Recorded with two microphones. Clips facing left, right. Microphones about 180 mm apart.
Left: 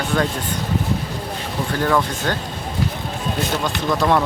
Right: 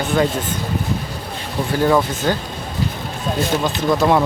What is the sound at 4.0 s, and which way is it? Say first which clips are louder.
Speech: right 1 dB; 10° right (ahead or behind).